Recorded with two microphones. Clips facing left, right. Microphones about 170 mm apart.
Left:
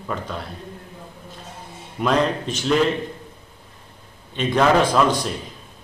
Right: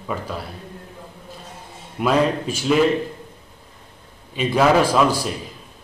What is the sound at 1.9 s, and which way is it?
Speech, 5° right (ahead or behind).